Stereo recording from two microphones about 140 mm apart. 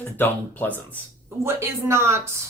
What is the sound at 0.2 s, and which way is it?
Speech, 15° left (ahead or behind).